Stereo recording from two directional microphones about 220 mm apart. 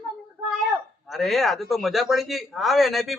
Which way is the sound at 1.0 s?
Centre (ahead or behind).